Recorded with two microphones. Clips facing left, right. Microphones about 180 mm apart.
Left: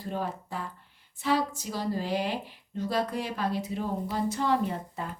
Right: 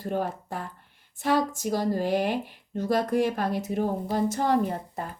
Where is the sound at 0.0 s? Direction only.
50° right (ahead or behind).